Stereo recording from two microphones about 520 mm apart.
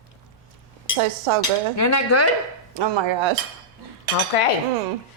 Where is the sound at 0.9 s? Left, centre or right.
Right.